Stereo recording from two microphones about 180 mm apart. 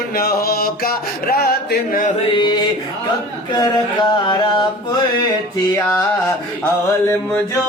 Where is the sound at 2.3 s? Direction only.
25° left (ahead or behind).